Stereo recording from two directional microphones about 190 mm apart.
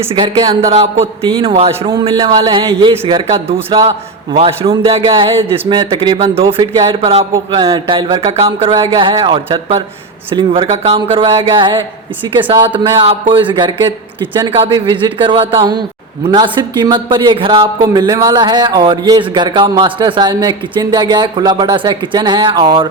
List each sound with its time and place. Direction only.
0.1 s speech: 25° right (ahead or behind)
1.4 s speech: 30° right (ahead or behind)